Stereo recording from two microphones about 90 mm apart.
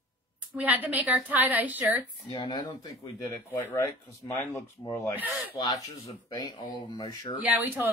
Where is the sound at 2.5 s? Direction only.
55° left (ahead or behind).